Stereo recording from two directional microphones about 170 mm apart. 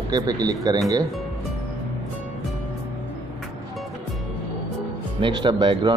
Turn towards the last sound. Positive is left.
turn(degrees=-25)  # may be behind; listen again after turning